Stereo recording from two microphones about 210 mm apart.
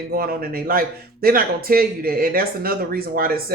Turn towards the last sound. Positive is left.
turn(degrees=-45)  # may be behind; listen again after turning